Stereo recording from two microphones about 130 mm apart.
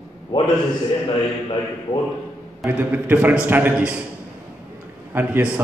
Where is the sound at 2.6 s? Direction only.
15° right (ahead or behind).